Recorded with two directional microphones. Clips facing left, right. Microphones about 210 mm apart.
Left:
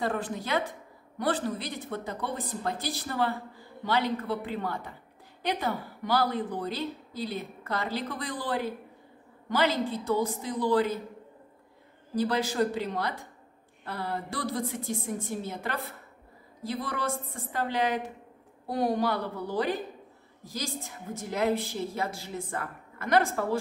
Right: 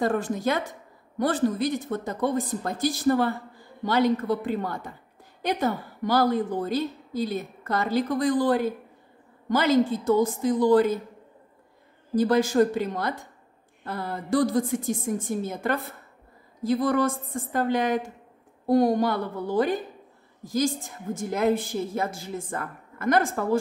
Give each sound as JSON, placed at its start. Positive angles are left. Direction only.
{"t": 0.0, "sound": "a woman's voice", "side_deg": -45}
{"t": 12.2, "sound": "a woman's voice", "side_deg": -50}